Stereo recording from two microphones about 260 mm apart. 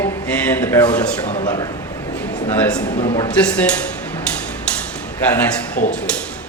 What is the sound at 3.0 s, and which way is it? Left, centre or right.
Speech, left.